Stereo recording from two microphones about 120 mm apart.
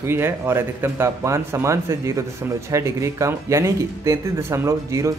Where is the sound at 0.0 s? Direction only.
20° right (ahead or behind).